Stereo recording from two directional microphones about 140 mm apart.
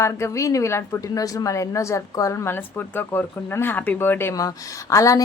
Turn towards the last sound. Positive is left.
turn(degrees=25)  # may be behind; listen again after turning